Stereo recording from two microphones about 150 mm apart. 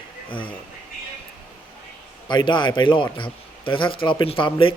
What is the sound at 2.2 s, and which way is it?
A man's voice, 30° left (ahead or behind).